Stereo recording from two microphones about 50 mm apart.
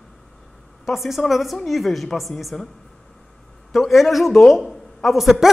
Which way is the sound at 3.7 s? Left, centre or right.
Centre.